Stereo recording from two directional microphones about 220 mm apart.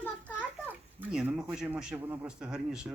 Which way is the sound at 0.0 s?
5° left (ahead or behind).